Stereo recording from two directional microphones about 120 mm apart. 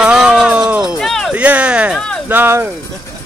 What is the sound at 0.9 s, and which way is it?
Speech, 5° left (ahead or behind).